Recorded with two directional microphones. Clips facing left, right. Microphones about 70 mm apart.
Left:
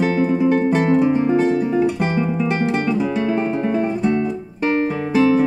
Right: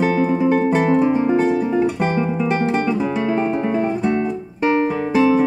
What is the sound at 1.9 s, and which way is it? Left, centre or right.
Guitar, right.